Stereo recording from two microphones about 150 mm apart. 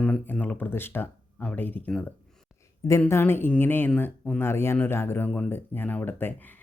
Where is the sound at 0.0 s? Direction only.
5° left (ahead or behind).